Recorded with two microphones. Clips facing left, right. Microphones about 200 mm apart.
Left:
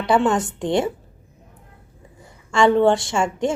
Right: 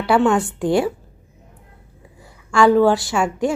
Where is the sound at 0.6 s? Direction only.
5° right (ahead or behind).